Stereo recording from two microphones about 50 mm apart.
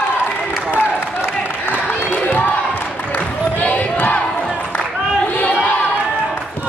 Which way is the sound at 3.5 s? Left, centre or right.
Left.